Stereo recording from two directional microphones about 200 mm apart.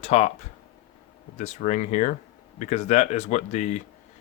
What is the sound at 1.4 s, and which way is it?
Speech, 35° left (ahead or behind).